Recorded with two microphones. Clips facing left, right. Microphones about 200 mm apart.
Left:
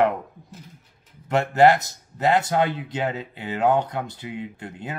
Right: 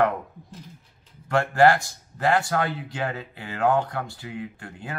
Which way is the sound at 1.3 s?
20° left (ahead or behind).